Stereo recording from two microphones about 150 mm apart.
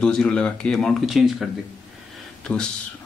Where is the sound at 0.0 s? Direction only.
5° left (ahead or behind).